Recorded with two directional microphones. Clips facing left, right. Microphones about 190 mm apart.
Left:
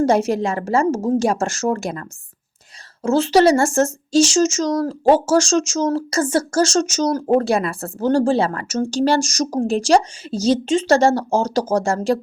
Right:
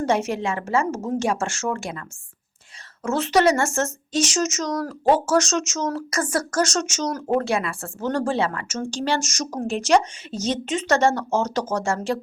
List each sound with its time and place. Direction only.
0.0 s speech: 35° left (ahead or behind)
3.0 s speech: 30° left (ahead or behind)